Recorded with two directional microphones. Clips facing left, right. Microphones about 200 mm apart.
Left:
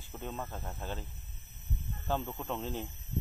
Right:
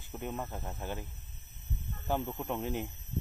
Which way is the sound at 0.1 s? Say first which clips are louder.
Right 2 dB; 15° right (ahead or behind).